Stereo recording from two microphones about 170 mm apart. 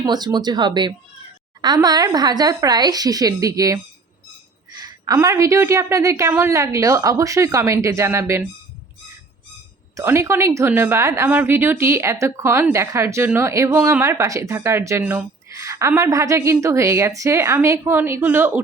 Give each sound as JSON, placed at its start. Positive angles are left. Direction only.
{"t": 0.0, "sound": "a woman's voice", "side_deg": -25}
{"t": 9.9, "sound": "a woman's voice", "side_deg": -15}